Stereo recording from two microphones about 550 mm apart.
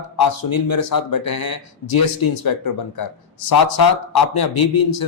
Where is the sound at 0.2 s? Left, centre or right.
Left.